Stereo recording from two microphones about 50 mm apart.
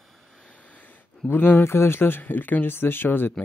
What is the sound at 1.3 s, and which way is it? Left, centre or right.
Speech, left.